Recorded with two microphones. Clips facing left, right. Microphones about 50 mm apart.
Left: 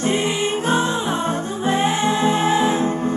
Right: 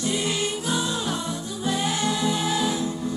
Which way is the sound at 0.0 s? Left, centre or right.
Left.